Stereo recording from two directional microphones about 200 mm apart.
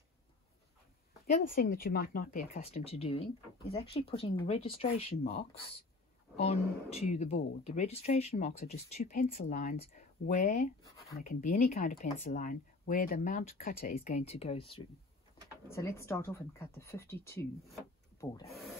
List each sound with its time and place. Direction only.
1.2 s speech: 40° left (ahead or behind)
2.6 s speech: 30° left (ahead or behind)
15.7 s speech: 15° left (ahead or behind)